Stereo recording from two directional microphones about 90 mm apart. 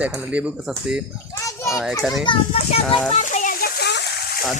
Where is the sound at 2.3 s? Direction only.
70° left (ahead or behind).